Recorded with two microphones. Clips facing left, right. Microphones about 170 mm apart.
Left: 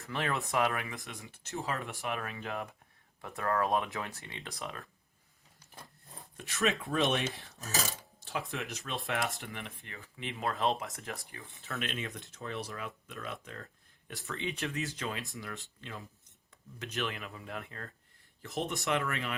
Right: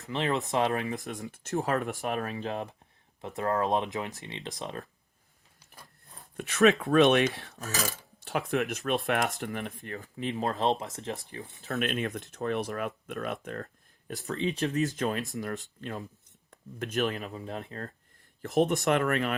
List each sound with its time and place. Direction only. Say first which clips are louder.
0.0 s speech: right 5 dB; 20° right (ahead or behind)
3.2 s speech: right 3 dB; 20° right (ahead or behind)
6.3 s chopping: right 10 dB; 65° right (ahead or behind)
8.2 s speech: right 9 dB; 60° right (ahead or behind); by 11.2 s 25° right (ahead or behind)
11.3 s speech: right 7 dB; 35° right (ahead or behind); by 13.7 s 55° right (ahead or behind)
14.1 s speech: right 7 dB; 35° right (ahead or behind)
18.9 s speech: right 7 dB; 55° right (ahead or behind)